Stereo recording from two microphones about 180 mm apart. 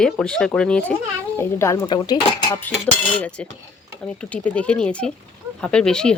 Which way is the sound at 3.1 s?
5° left (ahead or behind).